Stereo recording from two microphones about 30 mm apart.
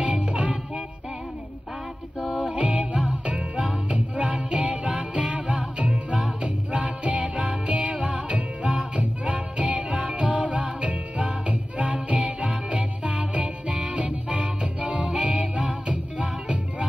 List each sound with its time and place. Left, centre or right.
0.0 s music: right
2.5 s music: right